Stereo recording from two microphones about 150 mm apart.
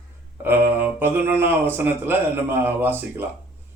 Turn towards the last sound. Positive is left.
turn(degrees=-15)  # may be behind; listen again after turning